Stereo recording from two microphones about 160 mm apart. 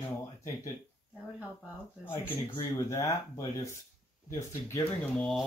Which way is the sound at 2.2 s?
15° left (ahead or behind).